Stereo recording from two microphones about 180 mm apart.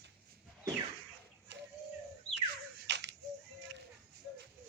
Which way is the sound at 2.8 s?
75° right (ahead or behind).